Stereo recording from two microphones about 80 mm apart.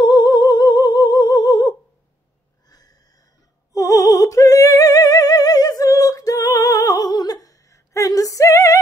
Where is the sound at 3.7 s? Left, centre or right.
Left.